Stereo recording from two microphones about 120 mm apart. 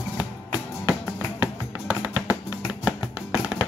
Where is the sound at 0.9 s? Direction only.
30° left (ahead or behind).